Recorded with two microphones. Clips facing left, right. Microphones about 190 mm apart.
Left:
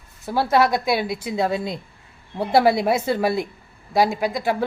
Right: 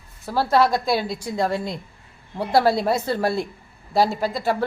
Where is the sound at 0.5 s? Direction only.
15° left (ahead or behind).